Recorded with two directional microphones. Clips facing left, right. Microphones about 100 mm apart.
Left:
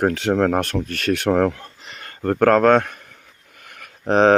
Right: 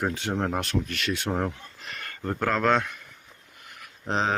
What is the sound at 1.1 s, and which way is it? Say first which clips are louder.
Speech: left 11 dB; 75° left (ahead or behind).